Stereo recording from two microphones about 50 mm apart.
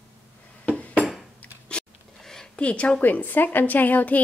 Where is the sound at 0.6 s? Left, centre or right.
Left.